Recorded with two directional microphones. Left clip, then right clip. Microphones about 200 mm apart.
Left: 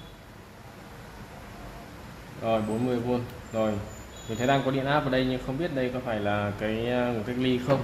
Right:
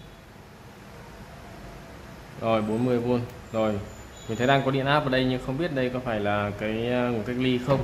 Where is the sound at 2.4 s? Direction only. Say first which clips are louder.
Right 2 dB; 15° right (ahead or behind).